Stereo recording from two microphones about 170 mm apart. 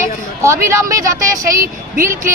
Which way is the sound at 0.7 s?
20° right (ahead or behind).